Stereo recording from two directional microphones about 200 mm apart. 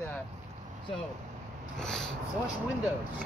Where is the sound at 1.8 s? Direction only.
5° left (ahead or behind).